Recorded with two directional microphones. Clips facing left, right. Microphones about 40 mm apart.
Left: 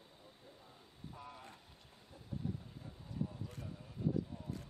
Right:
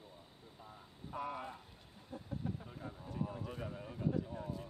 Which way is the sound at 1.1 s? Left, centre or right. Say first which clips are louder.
Right 12 dB; right.